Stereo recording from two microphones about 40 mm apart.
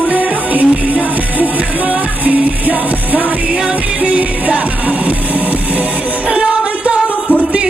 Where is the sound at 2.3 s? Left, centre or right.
Right.